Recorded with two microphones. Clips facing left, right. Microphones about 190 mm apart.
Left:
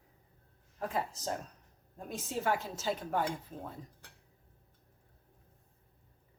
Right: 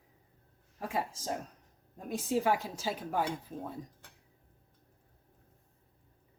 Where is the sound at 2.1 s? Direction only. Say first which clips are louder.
Right 4 dB; 10° right (ahead or behind).